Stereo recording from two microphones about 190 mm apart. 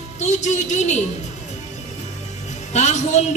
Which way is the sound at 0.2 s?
35° left (ahead or behind).